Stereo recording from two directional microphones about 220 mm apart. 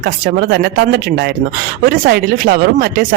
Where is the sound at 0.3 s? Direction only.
45° right (ahead or behind).